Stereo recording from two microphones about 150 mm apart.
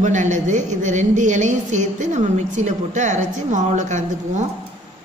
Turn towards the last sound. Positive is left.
turn(degrees=-55)  # may be behind; listen again after turning